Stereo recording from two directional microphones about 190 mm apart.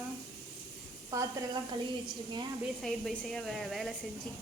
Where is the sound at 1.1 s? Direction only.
15° right (ahead or behind).